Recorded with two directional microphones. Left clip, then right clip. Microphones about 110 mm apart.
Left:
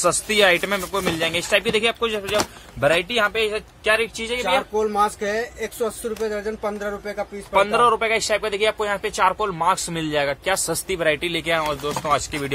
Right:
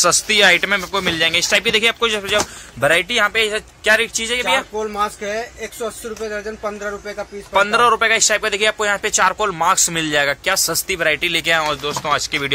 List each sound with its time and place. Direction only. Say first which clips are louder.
0.0 s speech: right 4 dB; 15° left (ahead or behind)
4.9 s speech: right 1 dB; 50° left (ahead or behind)
7.5 s speech: right 3 dB; 5° left (ahead or behind)
10.7 s speech: right 3 dB; 25° left (ahead or behind)
11.4 s speech: right 5 dB; 10° left (ahead or behind)